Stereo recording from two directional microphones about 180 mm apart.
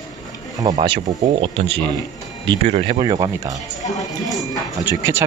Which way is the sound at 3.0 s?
25° right (ahead or behind).